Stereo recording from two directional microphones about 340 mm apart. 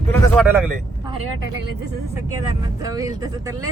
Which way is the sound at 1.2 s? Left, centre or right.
Right.